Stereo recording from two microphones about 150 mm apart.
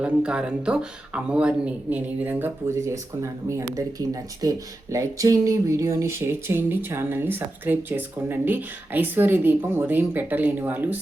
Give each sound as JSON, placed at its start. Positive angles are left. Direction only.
{"t": 0.0, "sound": "speech", "side_deg": -5}